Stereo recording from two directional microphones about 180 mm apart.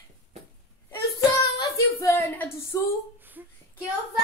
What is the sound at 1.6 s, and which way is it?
Speech, 15° left (ahead or behind).